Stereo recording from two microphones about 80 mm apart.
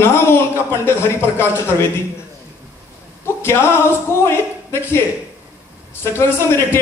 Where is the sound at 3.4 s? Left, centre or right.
Left.